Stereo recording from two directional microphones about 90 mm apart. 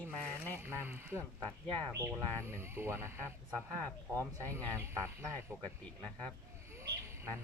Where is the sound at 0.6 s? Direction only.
25° right (ahead or behind).